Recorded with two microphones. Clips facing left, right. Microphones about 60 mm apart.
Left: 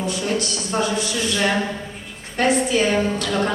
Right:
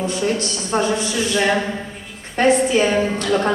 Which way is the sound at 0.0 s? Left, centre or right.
Right.